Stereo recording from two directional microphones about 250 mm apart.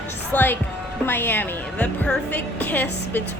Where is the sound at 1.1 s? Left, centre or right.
Centre.